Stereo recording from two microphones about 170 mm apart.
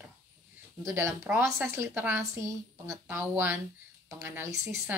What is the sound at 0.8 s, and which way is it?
Speech, 15° right (ahead or behind).